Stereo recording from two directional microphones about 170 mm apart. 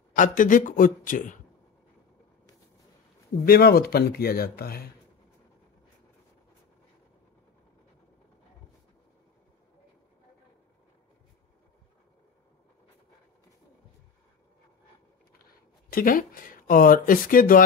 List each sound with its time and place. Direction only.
0.1 s speech: 50° left (ahead or behind)
3.4 s speech: 60° left (ahead or behind)
15.4 s speech: 55° left (ahead or behind)